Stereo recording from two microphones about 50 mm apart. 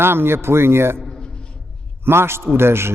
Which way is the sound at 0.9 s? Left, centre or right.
Centre.